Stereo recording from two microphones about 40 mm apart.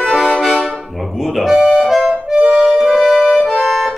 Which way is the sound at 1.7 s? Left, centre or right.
Centre.